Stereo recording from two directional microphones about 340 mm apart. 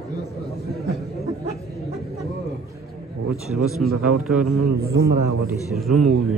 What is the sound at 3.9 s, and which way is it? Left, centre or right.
Speech, right.